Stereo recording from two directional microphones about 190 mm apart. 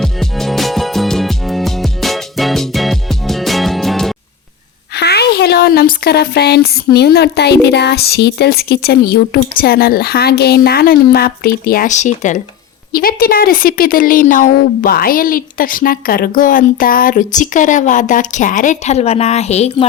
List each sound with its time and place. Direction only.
0.0 s music: centre (ahead or behind)
4.9 s speech: 60° left (ahead or behind); by 12.4 s 40° left (ahead or behind)
12.9 s a woman's voice: 50° left (ahead or behind); by 19.7 s 35° left (ahead or behind)